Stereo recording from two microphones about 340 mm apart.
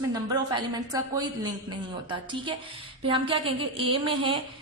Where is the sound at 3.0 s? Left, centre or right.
Centre.